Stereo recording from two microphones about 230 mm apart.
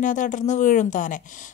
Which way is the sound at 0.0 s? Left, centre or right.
Left.